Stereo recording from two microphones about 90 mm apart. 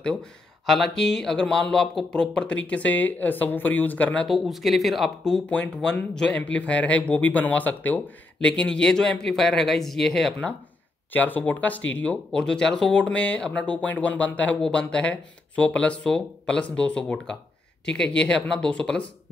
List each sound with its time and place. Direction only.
0.0 s speech: 10° left (ahead or behind)
4.3 s speech: centre (ahead or behind)
11.1 s speech: 20° left (ahead or behind)